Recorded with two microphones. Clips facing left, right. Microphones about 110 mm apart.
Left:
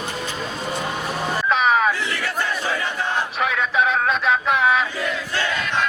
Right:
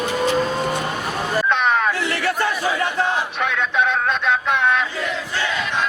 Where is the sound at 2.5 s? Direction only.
10° right (ahead or behind).